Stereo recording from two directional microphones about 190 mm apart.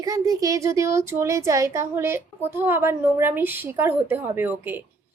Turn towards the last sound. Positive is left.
turn(degrees=-10)  # may be behind; listen again after turning